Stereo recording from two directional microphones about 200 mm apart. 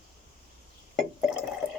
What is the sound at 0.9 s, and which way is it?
Drip, centre (ahead or behind).